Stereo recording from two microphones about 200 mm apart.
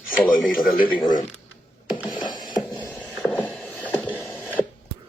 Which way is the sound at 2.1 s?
20° left (ahead or behind).